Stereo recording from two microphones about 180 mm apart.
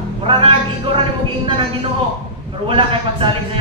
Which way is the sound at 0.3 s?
30° right (ahead or behind).